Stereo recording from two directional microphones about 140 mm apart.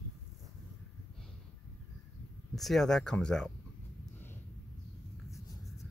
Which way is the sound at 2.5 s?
Centre (ahead or behind).